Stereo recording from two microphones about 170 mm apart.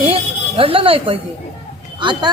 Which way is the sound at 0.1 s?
35° right (ahead or behind).